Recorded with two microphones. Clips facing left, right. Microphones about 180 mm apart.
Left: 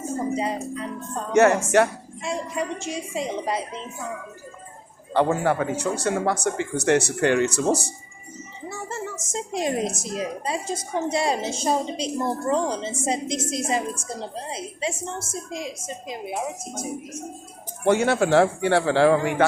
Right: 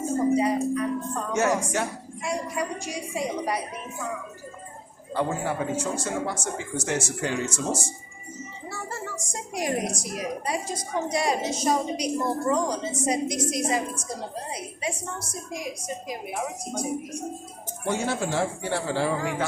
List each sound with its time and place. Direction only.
0.3 s a woman's voice: 25° left (ahead or behind)
1.3 s speech: 65° left (ahead or behind)
2.2 s a woman's voice: 25° left (ahead or behind)
5.1 s speech: 70° left (ahead or behind)
8.7 s a woman's voice: 20° left (ahead or behind)
17.8 s speech: 70° left (ahead or behind)